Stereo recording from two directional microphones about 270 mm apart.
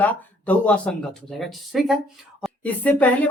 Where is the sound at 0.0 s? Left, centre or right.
Centre.